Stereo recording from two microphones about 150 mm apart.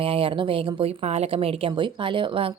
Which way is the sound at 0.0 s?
35° right (ahead or behind).